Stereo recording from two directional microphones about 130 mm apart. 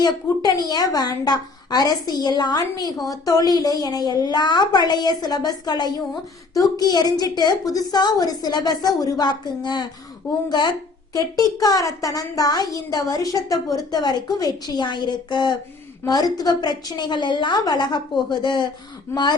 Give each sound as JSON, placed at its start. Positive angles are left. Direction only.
{"t": 0.0, "sound": "a woman's voice", "side_deg": 30}
{"t": 11.1, "sound": "a woman's voice", "side_deg": 25}